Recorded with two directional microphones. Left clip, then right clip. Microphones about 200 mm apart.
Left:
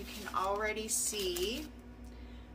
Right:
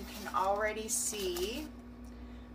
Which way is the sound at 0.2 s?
15° left (ahead or behind).